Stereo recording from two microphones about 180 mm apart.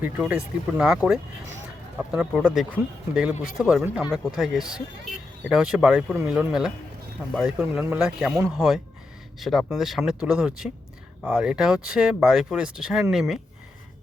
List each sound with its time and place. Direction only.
0.0 s speech: 5° right (ahead or behind)